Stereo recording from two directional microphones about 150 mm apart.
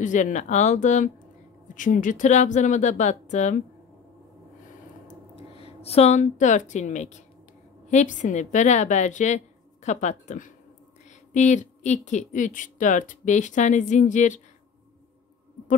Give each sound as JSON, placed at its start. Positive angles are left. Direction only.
{"t": 0.0, "sound": "a woman's voice", "side_deg": 55}
{"t": 5.3, "sound": "a woman's voice", "side_deg": 40}